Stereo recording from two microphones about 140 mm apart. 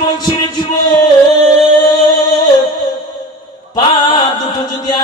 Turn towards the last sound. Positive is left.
turn(degrees=30)  # may be behind; listen again after turning